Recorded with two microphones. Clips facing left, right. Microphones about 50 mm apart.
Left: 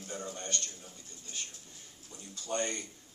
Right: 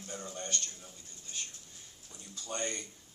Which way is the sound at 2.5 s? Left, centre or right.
Left.